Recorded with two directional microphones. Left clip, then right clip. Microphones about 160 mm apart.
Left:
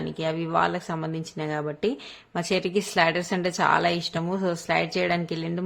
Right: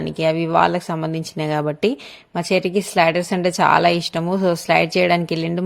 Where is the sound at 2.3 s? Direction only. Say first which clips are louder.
Right 6 dB; 30° right (ahead or behind).